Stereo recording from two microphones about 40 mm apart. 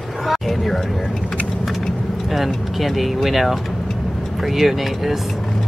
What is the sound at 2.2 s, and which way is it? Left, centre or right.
Speech, centre.